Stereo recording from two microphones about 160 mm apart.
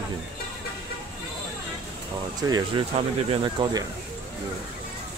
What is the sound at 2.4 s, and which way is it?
Speech, 25° right (ahead or behind).